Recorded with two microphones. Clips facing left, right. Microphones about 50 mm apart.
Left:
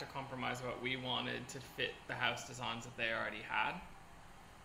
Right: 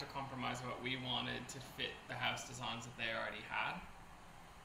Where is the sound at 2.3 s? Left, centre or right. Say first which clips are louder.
Left 1 dB; left.